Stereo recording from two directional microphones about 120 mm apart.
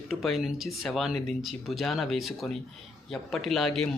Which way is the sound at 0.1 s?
Centre (ahead or behind).